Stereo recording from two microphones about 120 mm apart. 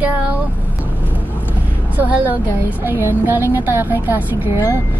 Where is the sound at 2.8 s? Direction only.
15° right (ahead or behind).